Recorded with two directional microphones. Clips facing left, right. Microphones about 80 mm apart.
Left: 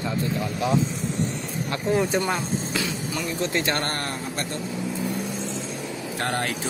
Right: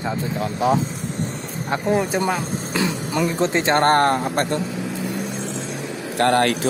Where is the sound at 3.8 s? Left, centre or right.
Right.